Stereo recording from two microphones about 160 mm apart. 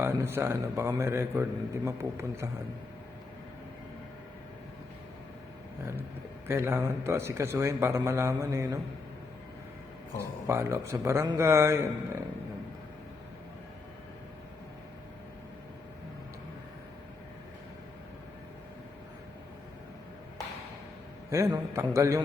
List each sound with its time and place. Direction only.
0.0 s speech: 15° right (ahead or behind)
6.5 s speech: 15° right (ahead or behind)
10.2 s speech: 15° right (ahead or behind)
21.2 s speech: 20° right (ahead or behind)